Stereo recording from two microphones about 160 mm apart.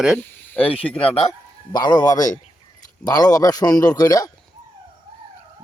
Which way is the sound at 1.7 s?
25° left (ahead or behind).